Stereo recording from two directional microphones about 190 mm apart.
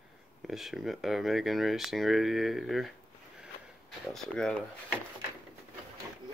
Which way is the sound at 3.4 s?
Centre (ahead or behind).